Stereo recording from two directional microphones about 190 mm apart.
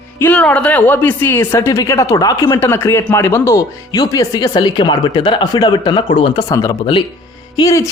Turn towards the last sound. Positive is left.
turn(degrees=20)  # may be behind; listen again after turning